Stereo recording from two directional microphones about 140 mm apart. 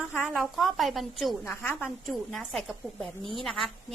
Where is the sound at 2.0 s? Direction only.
Centre (ahead or behind).